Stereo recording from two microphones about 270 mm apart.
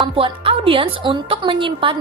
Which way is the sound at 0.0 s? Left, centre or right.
Centre.